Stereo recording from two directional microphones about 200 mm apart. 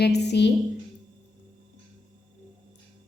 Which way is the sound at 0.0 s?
55° left (ahead or behind).